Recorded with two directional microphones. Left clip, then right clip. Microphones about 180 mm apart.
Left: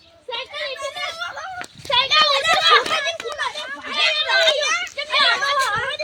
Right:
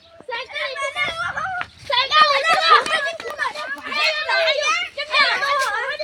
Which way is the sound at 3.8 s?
Centre (ahead or behind).